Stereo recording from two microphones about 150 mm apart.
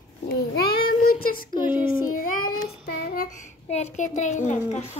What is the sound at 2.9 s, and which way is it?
Child singing, 80° left.